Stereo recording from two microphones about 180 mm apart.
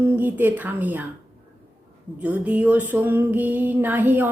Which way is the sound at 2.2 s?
10° right (ahead or behind).